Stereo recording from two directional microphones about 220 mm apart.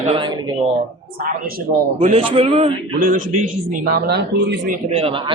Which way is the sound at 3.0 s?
35° right (ahead or behind).